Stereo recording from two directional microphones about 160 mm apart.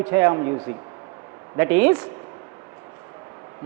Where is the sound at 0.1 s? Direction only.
15° right (ahead or behind).